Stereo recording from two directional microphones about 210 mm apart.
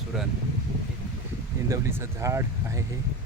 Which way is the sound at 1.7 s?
10° right (ahead or behind).